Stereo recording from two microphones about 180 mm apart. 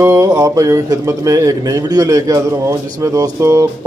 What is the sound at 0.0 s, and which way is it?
Speech, 15° right (ahead or behind).